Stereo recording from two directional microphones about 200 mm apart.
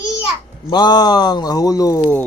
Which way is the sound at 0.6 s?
20° left (ahead or behind).